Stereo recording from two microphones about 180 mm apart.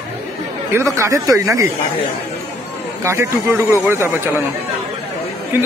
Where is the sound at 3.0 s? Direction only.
15° right (ahead or behind).